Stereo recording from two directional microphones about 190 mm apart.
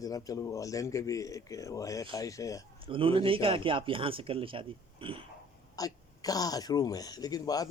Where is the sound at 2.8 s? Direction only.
25° right (ahead or behind).